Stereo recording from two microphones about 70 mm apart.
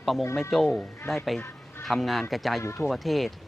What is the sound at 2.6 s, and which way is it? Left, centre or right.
Speech, left.